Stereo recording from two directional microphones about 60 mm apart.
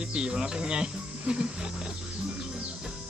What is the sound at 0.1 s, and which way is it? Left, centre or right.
Speech, centre.